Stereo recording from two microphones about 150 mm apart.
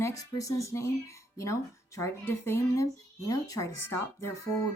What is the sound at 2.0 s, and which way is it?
Speech, 15° left (ahead or behind).